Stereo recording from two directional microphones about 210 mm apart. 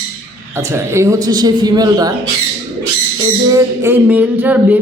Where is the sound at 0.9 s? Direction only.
15° right (ahead or behind).